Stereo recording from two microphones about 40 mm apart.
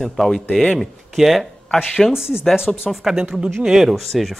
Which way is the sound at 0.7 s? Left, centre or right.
Centre.